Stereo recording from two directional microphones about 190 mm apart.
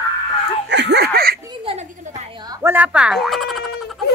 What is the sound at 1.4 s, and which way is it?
Giggle, 30° right (ahead or behind).